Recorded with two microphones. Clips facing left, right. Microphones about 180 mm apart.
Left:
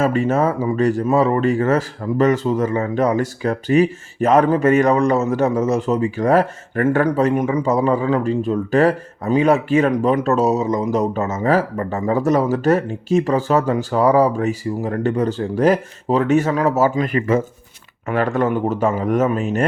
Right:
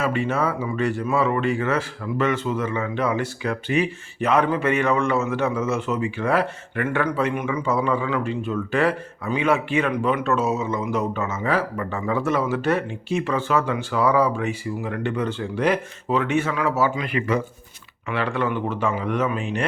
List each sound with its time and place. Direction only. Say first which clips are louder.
0.0 s speech: left 6 dB; 40° left (ahead or behind)